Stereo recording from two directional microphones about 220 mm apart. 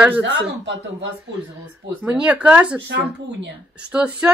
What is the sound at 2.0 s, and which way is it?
A woman's voice, 5° right (ahead or behind).